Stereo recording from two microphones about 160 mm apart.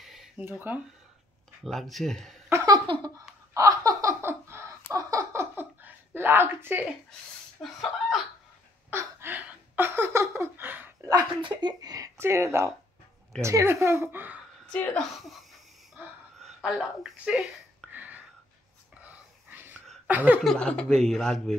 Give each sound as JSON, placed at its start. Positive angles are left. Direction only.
{"t": 0.0, "sound": "a sound", "side_deg": 0}
{"t": 0.5, "sound": "a woman's voice", "side_deg": -10}
{"t": 1.6, "sound": "speech", "side_deg": 0}
{"t": 2.5, "sound": "giggle", "side_deg": -20}
{"t": 3.5, "sound": "laughter", "side_deg": -20}
{"t": 4.9, "sound": "a sound", "side_deg": -20}
{"t": 7.6, "sound": "speech", "side_deg": 0}
{"t": 8.9, "sound": "a sound", "side_deg": -10}
{"t": 11.1, "sound": "a woman's voice", "side_deg": -25}
{"t": 14.7, "sound": "a woman's voice", "side_deg": 10}
{"t": 16.3, "sound": "a woman's voice", "side_deg": 0}
{"t": 17.9, "sound": "whispering", "side_deg": -10}
{"t": 18.9, "sound": "a sound", "side_deg": -10}
{"t": 20.4, "sound": "speech", "side_deg": 5}